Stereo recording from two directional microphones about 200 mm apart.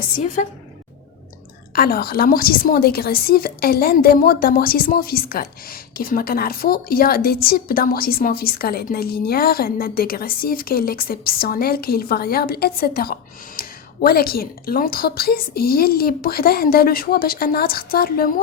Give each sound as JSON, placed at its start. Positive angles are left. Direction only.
{"t": 0.4, "sound": "a woman's voice", "side_deg": 40}
{"t": 1.7, "sound": "a woman's voice", "side_deg": 50}